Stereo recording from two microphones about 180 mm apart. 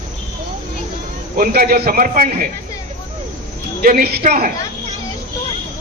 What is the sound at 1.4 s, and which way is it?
A man's voice, 55° right (ahead or behind).